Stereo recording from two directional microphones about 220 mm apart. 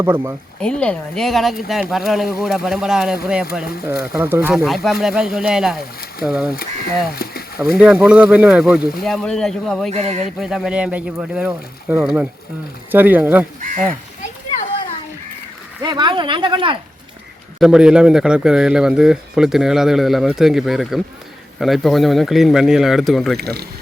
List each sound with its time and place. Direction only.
0.0 s speech: 10° right (ahead or behind)
0.6 s a man's voice: 5° left (ahead or behind)
7.2 s a sound: 45° left (ahead or behind)
7.8 s a man's voice: 5° right (ahead or behind)
9.9 s speech: 30° right (ahead or behind)
10.4 s a man's voice: centre (ahead or behind)
13.6 s speech: 35° right (ahead or behind)
15.8 s speech: 20° right (ahead or behind)
17.6 s a man's voice: 5° right (ahead or behind)